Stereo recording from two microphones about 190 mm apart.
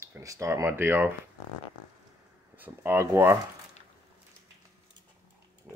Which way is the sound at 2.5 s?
10° right (ahead or behind).